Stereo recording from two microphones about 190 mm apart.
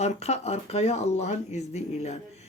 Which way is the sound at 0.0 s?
35° left (ahead or behind).